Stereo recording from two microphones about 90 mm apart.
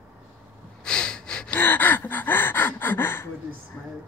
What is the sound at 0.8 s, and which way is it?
Snort, 10° left (ahead or behind).